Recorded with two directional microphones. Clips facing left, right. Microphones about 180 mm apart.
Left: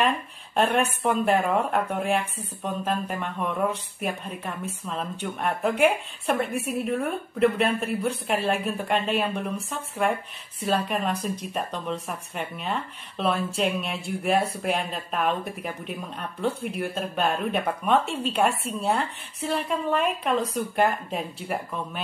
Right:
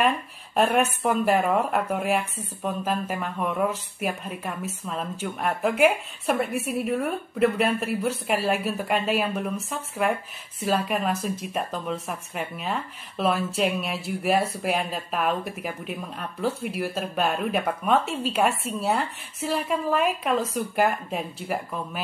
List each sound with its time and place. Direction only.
0.6 s speech: 5° right (ahead or behind)